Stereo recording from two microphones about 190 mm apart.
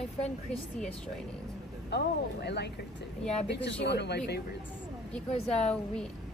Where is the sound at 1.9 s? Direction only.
60° left (ahead or behind).